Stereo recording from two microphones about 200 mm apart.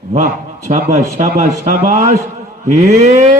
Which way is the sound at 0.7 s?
35° right (ahead or behind).